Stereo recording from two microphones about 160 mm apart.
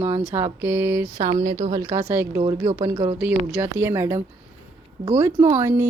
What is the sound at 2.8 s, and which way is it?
Mantra, 35° right (ahead or behind).